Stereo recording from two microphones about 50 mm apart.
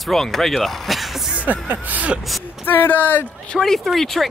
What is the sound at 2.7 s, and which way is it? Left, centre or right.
Speech, left.